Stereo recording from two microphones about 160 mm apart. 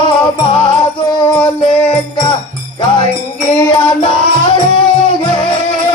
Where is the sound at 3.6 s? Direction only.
30° left (ahead or behind).